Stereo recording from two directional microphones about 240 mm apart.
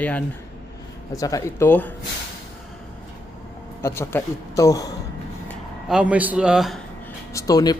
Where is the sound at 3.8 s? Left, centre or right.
Centre.